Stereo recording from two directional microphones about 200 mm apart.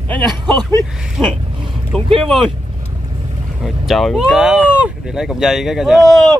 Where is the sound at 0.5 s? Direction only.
20° right (ahead or behind).